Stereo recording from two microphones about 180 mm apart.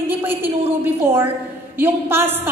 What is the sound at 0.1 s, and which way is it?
A woman's voice, 10° right (ahead or behind).